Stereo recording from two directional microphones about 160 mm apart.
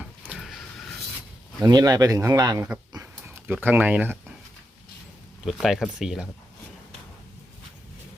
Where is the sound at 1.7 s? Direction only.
25° right (ahead or behind).